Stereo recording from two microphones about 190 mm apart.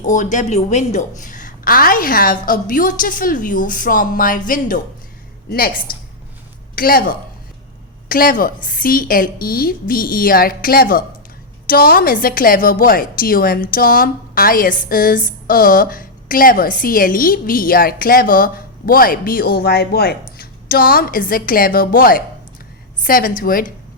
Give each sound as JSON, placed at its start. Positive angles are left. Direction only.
{"t": 0.0, "sound": "a woman's voice", "side_deg": 40}